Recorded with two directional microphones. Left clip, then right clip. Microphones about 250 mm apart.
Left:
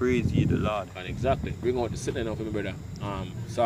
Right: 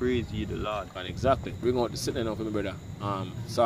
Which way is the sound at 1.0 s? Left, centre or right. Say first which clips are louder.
Right 1 dB; centre.